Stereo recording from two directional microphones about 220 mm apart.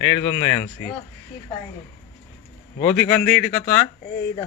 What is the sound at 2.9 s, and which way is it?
Speech, 5° left (ahead or behind).